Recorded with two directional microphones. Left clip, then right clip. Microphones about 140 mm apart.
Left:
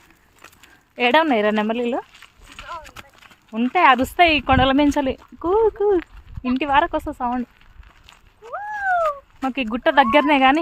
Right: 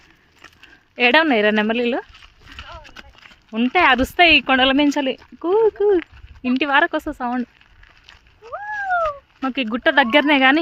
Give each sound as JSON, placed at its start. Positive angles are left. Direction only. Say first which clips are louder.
{"t": 0.9, "sound": "speech", "louder": "right 2 dB", "side_deg": -20}
{"t": 2.7, "sound": "clip-clop", "louder": "left 4 dB", "side_deg": -15}
{"t": 3.2, "sound": "speech", "louder": "right 2 dB", "side_deg": -30}
{"t": 6.5, "sound": "speech", "louder": "right 1 dB", "side_deg": -30}
{"t": 8.1, "sound": "a sound", "louder": "left 1 dB", "side_deg": -25}
{"t": 9.0, "sound": "cat", "louder": "even", "side_deg": -20}
{"t": 9.7, "sound": "speech", "louder": "even", "side_deg": -20}